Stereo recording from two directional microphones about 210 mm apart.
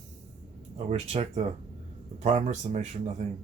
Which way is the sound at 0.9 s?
30° right (ahead or behind).